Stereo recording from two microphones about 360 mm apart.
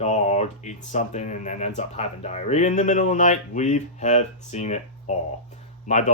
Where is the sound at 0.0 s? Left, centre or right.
Centre.